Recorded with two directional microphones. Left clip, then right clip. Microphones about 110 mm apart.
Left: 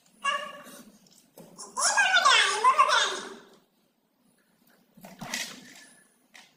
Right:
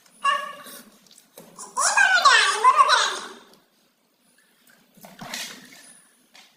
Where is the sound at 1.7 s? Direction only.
15° left (ahead or behind).